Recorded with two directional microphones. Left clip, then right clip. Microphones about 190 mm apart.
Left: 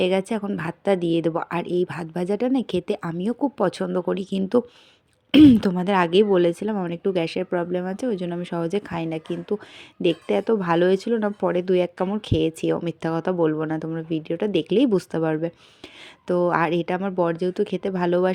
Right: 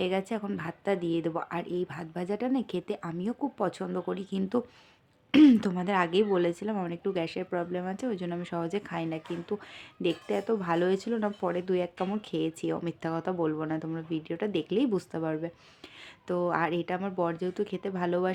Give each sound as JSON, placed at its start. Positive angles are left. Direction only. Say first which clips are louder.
{"t": 0.0, "sound": "a woman's voice", "louder": "left 8 dB", "side_deg": 30}